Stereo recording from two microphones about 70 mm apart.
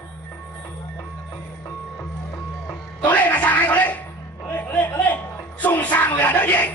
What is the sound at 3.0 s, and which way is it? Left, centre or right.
Music, left.